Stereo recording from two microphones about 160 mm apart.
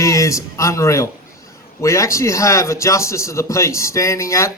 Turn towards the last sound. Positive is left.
turn(degrees=20)  # may be behind; listen again after turning